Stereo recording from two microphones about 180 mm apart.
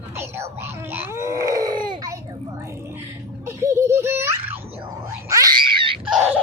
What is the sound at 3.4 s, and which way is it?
Giggle, 15° right (ahead or behind).